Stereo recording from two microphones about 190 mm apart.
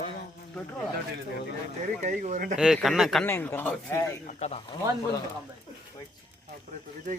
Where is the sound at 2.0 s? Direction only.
40° right (ahead or behind).